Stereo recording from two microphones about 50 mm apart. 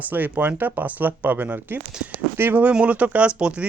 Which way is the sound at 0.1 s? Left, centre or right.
Right.